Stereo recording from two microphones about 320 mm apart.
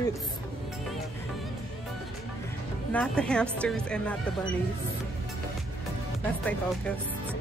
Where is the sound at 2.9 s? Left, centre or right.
Centre.